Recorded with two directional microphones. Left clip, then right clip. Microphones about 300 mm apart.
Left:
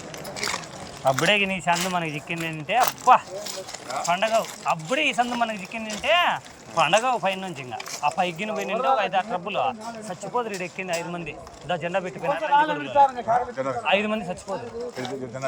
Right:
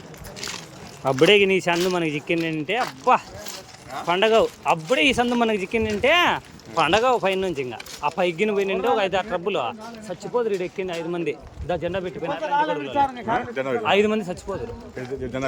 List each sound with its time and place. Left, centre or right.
1.2 s speech: centre
13.2 s speech: right
13.8 s speech: centre